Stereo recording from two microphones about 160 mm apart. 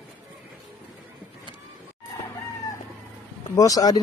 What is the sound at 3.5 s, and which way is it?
Speech, 20° left (ahead or behind).